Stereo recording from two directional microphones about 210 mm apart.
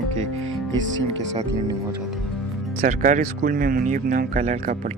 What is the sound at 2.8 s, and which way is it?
Speech, 40° right (ahead or behind).